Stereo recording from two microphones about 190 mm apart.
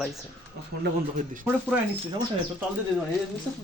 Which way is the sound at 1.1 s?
45° right (ahead or behind).